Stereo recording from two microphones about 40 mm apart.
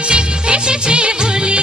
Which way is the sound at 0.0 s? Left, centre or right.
Right.